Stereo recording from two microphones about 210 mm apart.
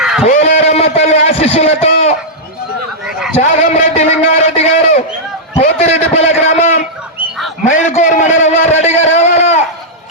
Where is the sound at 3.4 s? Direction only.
35° left (ahead or behind).